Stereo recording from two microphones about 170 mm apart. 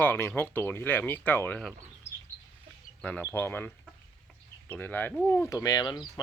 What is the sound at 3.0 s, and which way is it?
Speech, 5° left (ahead or behind).